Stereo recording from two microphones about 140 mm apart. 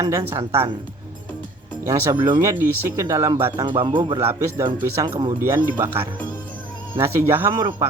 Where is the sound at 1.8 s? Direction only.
20° right (ahead or behind).